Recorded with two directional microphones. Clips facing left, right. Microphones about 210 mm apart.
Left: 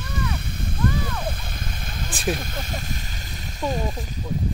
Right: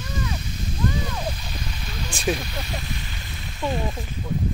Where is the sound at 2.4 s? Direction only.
45° left (ahead or behind).